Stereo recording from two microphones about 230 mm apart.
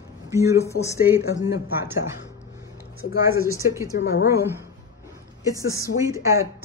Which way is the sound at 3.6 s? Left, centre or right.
Centre.